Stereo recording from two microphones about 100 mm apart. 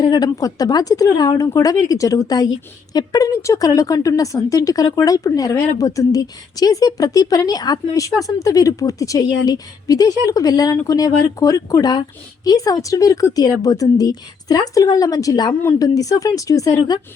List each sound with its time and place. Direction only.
0.0 s a woman's voice: 45° left (ahead or behind)